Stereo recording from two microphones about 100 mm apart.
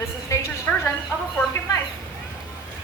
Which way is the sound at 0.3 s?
30° left (ahead or behind).